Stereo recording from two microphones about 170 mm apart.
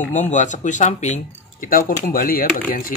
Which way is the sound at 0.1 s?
45° left (ahead or behind).